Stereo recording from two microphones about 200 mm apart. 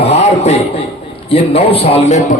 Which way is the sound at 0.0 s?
35° left (ahead or behind).